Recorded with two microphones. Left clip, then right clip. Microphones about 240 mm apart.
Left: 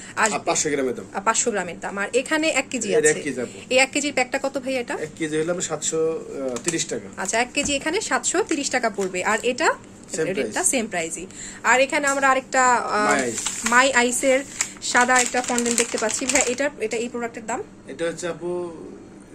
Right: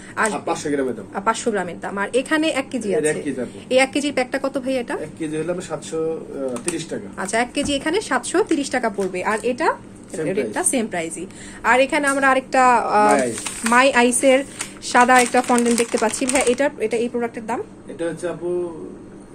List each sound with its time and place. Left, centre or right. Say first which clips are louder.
0.5 s a man's voice: even; left
1.1 s speech: right 2 dB; centre
3.0 s a man's voice: left 3 dB; left
3.6 s speech: right 2 dB; centre
5.2 s a man's voice: left 3 dB; left
7.2 s speech: right 2 dB; centre
17.9 s a man's voice: right 1 dB; left